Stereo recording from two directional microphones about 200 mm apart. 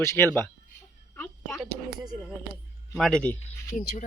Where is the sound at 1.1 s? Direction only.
5° left (ahead or behind).